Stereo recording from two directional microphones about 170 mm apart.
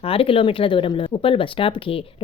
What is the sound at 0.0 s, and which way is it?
A woman's voice, 35° left (ahead or behind).